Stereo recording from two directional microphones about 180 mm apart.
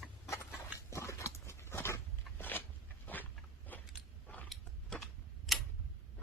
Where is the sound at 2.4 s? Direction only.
10° left (ahead or behind).